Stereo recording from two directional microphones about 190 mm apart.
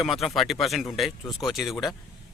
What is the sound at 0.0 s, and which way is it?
Speech, centre (ahead or behind).